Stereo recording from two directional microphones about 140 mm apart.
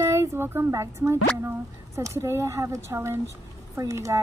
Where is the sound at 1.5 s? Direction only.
20° right (ahead or behind).